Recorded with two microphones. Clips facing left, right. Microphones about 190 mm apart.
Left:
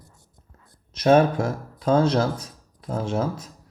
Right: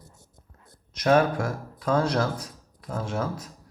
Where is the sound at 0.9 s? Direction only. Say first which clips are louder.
Left 4 dB; 25° left (ahead or behind).